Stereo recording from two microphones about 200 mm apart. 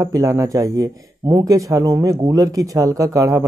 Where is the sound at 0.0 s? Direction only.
15° right (ahead or behind).